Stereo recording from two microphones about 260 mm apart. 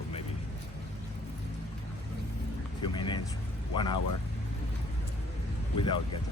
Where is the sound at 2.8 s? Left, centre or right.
Centre.